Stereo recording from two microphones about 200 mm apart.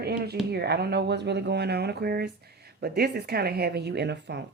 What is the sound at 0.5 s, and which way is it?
Speech, 55° right (ahead or behind).